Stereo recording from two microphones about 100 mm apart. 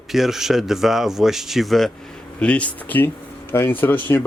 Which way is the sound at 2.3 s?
15° left (ahead or behind).